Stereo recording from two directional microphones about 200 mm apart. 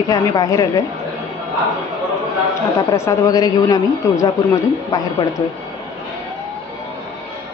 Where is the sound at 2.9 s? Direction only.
15° left (ahead or behind).